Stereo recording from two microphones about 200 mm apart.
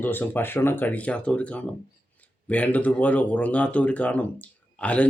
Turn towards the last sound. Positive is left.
turn(degrees=5)  # may be behind; listen again after turning